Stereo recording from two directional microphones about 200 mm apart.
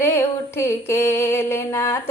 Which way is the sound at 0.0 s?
10° left (ahead or behind).